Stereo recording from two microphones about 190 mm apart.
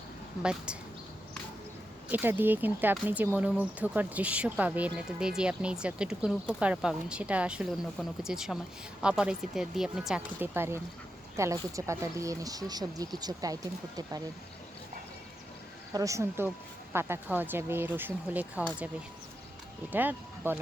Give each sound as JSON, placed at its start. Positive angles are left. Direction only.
{"t": 0.4, "sound": "speech", "side_deg": -5}
{"t": 2.0, "sound": "speech", "side_deg": -10}
{"t": 15.9, "sound": "speech", "side_deg": -15}
{"t": 19.9, "sound": "speech", "side_deg": -10}